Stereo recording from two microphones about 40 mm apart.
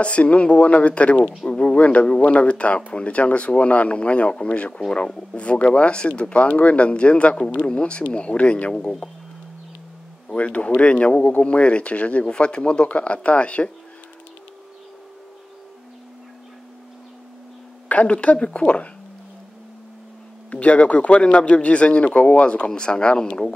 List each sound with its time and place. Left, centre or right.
0.0 s speech: left
10.2 s speech: left
17.8 s speech: left
20.5 s speech: left